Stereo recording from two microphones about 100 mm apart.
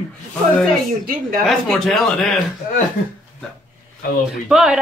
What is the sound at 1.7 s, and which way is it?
Speech, 5° left (ahead or behind).